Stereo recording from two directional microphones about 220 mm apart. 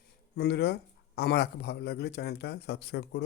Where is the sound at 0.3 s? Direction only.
50° left (ahead or behind).